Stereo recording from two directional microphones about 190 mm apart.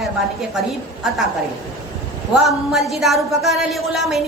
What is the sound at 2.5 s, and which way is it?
Speech, centre (ahead or behind).